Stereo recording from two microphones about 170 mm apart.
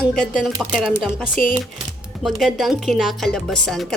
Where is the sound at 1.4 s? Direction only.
55° left (ahead or behind).